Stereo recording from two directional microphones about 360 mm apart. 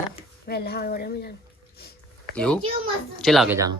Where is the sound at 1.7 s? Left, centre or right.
Left.